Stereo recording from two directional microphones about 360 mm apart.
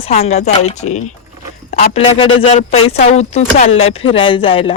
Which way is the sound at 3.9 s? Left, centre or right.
Centre.